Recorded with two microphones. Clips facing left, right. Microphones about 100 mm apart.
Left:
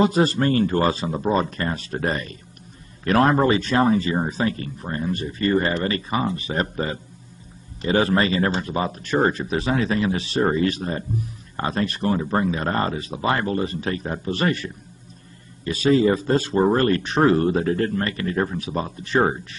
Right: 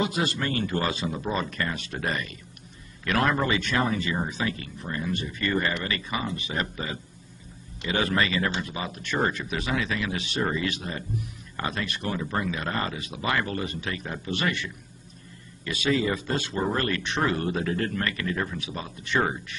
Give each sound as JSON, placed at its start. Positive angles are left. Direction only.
{"t": 0.0, "sound": "speech", "side_deg": 40}